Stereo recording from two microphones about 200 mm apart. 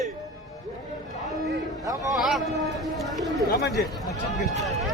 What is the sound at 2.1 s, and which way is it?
Vehicle, centre (ahead or behind).